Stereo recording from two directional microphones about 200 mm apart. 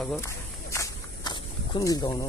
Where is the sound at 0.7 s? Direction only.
20° left (ahead or behind).